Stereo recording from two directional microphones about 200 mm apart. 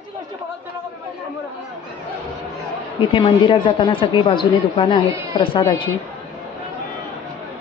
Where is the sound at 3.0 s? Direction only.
25° left (ahead or behind).